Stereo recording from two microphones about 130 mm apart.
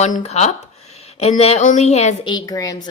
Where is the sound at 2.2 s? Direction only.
30° left (ahead or behind).